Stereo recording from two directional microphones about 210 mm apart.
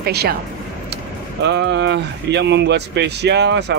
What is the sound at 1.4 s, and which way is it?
Speech, 55° right (ahead or behind).